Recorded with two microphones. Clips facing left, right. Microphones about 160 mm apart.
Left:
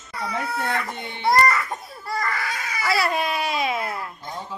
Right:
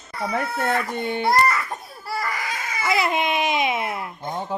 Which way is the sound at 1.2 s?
Centre (ahead or behind).